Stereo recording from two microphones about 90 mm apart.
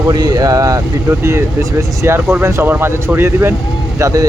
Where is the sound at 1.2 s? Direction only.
30° right (ahead or behind).